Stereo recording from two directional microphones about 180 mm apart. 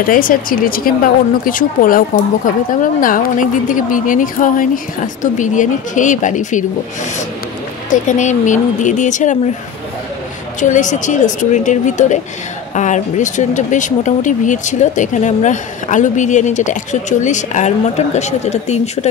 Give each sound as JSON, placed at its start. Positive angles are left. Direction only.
{"t": 0.0, "sound": "speech", "side_deg": 50}
{"t": 7.9, "sound": "speech", "side_deg": 45}
{"t": 10.6, "sound": "speech", "side_deg": 45}